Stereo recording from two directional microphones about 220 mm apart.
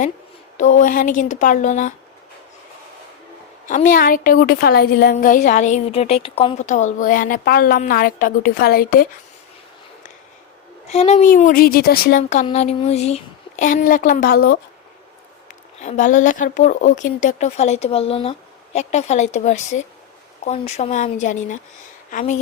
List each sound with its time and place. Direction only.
0.5 s a woman's voice: 35° left (ahead or behind)
3.7 s a woman's voice: 35° left (ahead or behind)
10.8 s a woman's voice: 30° left (ahead or behind); by 14.6 s 45° left (ahead or behind)
15.8 s a woman's voice: 35° left (ahead or behind)